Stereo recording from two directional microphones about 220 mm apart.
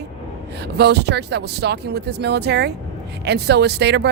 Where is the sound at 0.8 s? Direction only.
50° right (ahead or behind).